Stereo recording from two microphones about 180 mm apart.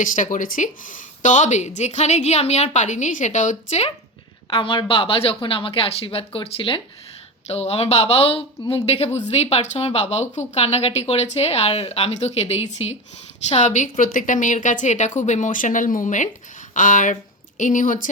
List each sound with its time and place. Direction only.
0.0 s a woman's voice: 45° left (ahead or behind)